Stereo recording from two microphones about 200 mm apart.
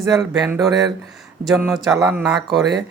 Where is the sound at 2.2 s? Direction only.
Centre (ahead or behind).